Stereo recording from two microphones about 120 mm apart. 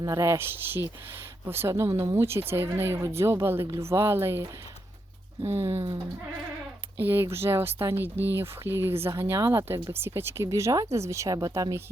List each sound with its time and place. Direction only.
0.0 s speech: 25° right (ahead or behind)
5.5 s speech: 20° right (ahead or behind)
6.9 s speech: 20° right (ahead or behind)